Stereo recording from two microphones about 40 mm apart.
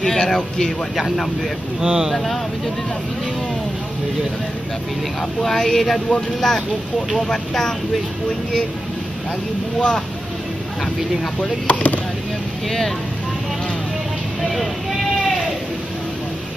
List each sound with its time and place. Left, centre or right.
0.0 s speech: centre
1.8 s speech: centre
5.4 s speech: centre
7.2 s speech: centre
9.8 s speech: left
11.6 s speech: left
14.4 s speech: centre